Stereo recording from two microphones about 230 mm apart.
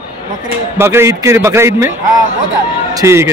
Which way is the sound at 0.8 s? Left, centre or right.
Centre.